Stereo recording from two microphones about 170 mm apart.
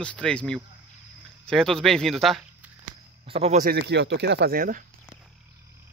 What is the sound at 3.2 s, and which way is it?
Speech, 35° right (ahead or behind).